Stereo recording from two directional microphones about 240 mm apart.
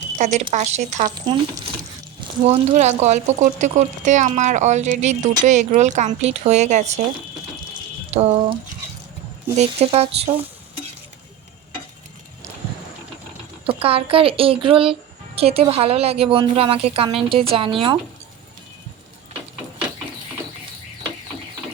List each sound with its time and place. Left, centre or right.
0.2 s speech: right
2.4 s speech: right
8.1 s speech: right
9.6 s speech: right
13.7 s speech: right